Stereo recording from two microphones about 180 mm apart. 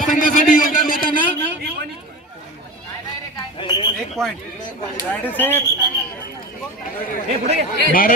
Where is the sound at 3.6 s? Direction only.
25° left (ahead or behind).